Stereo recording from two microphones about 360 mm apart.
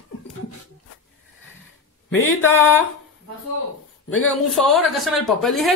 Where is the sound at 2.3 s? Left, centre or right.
Left.